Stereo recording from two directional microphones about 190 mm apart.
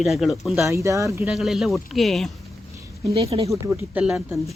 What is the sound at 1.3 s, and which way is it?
Speech, centre (ahead or behind).